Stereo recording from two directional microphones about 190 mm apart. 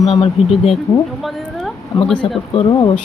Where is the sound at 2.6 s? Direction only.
30° left (ahead or behind).